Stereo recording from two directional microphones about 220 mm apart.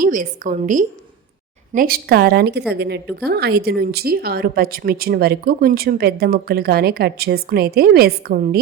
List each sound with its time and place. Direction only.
0.0 s a woman's voice: 35° right (ahead or behind)